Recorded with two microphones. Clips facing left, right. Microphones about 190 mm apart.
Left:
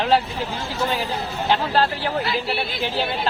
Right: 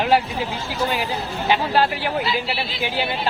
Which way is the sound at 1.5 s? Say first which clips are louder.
Right 1 dB; 10° right (ahead or behind).